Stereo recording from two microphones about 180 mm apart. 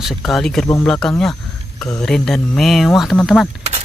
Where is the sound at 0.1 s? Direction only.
5° left (ahead or behind).